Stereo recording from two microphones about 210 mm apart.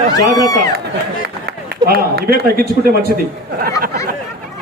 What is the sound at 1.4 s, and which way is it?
A man's voice, 50° right (ahead or behind).